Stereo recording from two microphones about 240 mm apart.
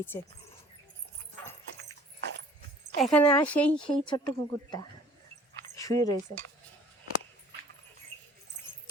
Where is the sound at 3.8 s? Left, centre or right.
Centre.